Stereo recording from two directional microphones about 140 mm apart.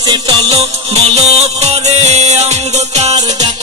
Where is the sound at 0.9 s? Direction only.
50° right (ahead or behind).